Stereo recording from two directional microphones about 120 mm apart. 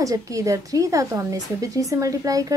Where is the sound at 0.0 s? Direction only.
25° right (ahead or behind).